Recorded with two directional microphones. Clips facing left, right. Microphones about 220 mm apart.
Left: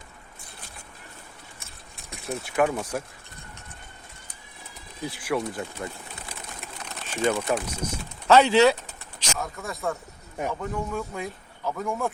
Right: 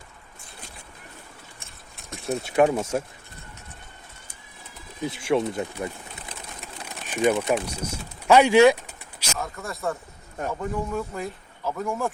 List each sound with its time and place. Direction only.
2.0 s a sound: centre (ahead or behind)
2.3 s speech: 25° right (ahead or behind)
5.0 s speech: 25° right (ahead or behind)
6.8 s pigeon: 15° right (ahead or behind)
7.5 s speech: 10° right (ahead or behind)
9.3 s speech: centre (ahead or behind)